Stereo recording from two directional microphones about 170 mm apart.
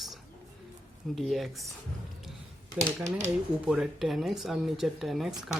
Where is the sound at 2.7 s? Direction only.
40° right (ahead or behind).